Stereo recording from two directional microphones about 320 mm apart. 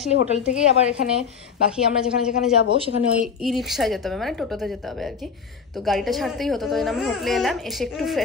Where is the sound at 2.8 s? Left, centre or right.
Centre.